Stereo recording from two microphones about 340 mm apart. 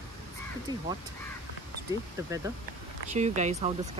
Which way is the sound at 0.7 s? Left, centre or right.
Centre.